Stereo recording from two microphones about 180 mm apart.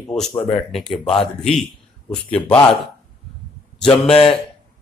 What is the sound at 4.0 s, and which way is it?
Speech, 35° left (ahead or behind).